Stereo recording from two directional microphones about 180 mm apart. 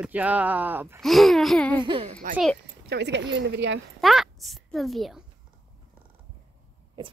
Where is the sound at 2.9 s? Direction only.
75° right (ahead or behind).